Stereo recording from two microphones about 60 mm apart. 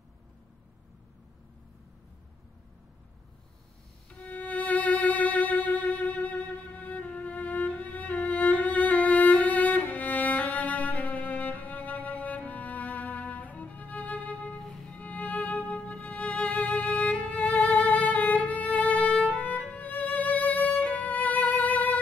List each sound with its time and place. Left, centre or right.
4.3 s music: left
14.6 s music: centre
15.0 s music: left